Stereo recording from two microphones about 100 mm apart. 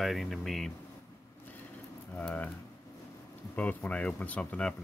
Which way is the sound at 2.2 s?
15° left (ahead or behind).